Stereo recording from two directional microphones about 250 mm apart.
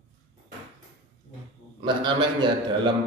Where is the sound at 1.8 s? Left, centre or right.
Centre.